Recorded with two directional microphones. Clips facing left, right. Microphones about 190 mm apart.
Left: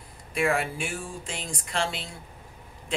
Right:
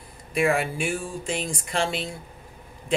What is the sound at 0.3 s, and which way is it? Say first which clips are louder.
Speech: right 3 dB; 10° right (ahead or behind).